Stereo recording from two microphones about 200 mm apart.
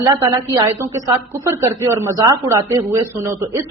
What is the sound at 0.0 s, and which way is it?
A woman's voice, 15° right (ahead or behind).